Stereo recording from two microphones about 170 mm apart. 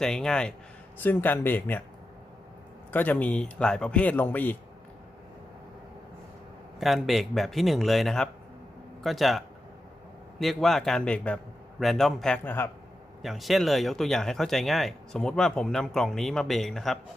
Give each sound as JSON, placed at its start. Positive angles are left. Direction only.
{"t": 0.0, "sound": "a man's voice", "side_deg": 5}
{"t": 2.9, "sound": "a man's voice", "side_deg": 10}
{"t": 6.7, "sound": "speech", "side_deg": 0}
{"t": 10.4, "sound": "speech", "side_deg": 0}
{"t": 13.2, "sound": "speech", "side_deg": 0}